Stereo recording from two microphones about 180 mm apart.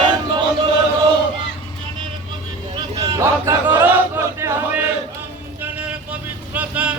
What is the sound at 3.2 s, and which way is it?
Chant, 15° right (ahead or behind).